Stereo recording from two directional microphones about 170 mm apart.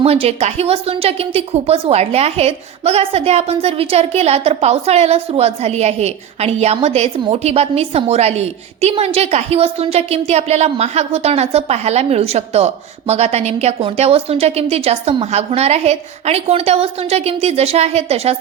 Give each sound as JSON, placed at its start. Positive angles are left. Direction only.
{"t": 0.0, "sound": "a woman's voice", "side_deg": -35}